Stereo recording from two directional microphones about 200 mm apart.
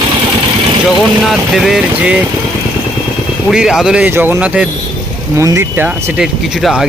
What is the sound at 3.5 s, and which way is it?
Speech, 5° right (ahead or behind).